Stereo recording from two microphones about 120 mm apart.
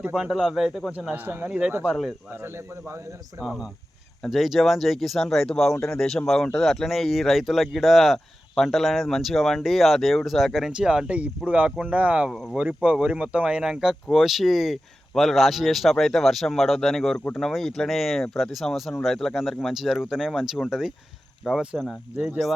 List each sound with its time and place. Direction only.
0.0 s speech: 5° right (ahead or behind)
2.3 s speech: 20° right (ahead or behind)
3.4 s speech: 5° right (ahead or behind)
12.6 s speech: 10° right (ahead or behind)